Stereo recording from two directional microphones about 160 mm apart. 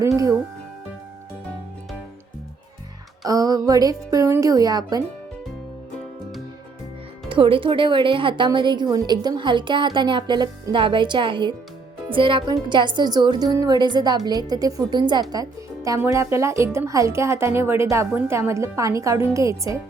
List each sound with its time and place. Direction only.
0.2 s speech: 20° right (ahead or behind)
3.2 s speech: 20° right (ahead or behind)
7.3 s speech: 35° right (ahead or behind)